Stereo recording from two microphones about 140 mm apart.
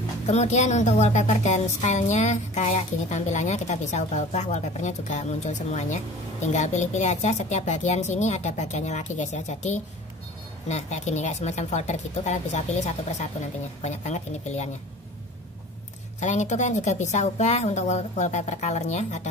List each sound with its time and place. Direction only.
0.3 s a woman's voice: 55° left (ahead or behind)
16.2 s a woman's voice: 55° left (ahead or behind)